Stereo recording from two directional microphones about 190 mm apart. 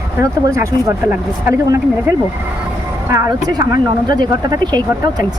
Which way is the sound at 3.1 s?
20° right (ahead or behind).